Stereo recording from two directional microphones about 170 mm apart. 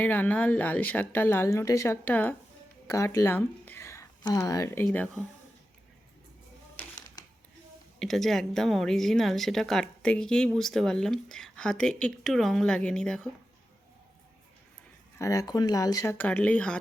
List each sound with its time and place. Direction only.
0.0 s speech: 10° left (ahead or behind)
4.9 s a woman's voice: 5° left (ahead or behind)
7.9 s a woman's voice: centre (ahead or behind)
15.2 s speech: 20° left (ahead or behind)